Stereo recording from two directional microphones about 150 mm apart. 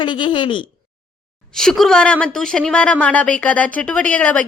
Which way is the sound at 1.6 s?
5° left (ahead or behind).